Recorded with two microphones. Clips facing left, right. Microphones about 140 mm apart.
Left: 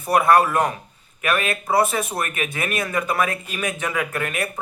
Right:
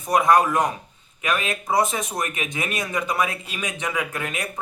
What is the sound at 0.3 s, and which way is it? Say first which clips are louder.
Speech: left 1 dB; 15° right (ahead or behind).